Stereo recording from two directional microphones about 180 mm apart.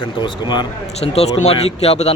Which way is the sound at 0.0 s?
25° left (ahead or behind).